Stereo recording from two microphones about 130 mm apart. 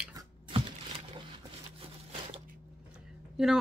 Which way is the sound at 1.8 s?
45° right (ahead or behind).